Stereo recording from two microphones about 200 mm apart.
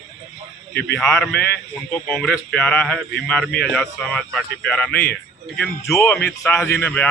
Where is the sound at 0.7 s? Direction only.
55° left (ahead or behind).